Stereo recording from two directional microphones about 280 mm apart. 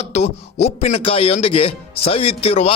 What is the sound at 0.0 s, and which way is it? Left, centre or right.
Speech, left.